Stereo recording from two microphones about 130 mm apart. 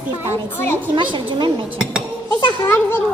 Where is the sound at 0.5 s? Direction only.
15° left (ahead or behind).